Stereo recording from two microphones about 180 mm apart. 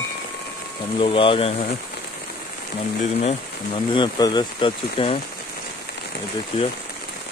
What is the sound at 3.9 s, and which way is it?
Speech, 25° left (ahead or behind).